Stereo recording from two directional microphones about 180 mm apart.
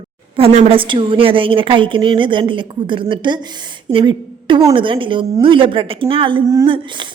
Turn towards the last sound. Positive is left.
turn(degrees=-30)  # may be behind; listen again after turning